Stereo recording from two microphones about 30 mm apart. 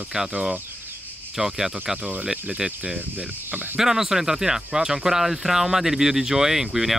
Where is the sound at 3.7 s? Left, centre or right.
Centre.